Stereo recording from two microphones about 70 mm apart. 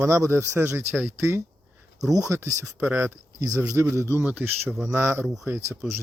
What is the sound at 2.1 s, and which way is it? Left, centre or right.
Speech, right.